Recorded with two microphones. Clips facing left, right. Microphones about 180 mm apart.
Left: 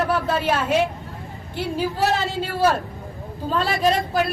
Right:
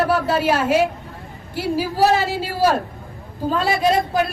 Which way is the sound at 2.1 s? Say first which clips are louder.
Right 3 dB; 10° right (ahead or behind).